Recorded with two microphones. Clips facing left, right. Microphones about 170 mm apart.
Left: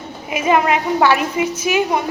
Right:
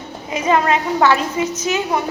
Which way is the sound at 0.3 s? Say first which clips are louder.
Left 1 dB; 15° left (ahead or behind).